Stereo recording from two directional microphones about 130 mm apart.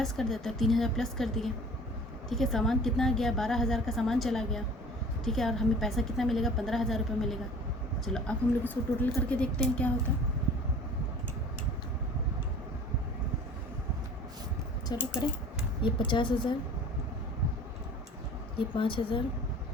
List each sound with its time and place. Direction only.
0.0 s a woman's voice: 5° left (ahead or behind)
14.9 s a woman's voice: 30° left (ahead or behind)
18.5 s a woman's voice: 40° left (ahead or behind)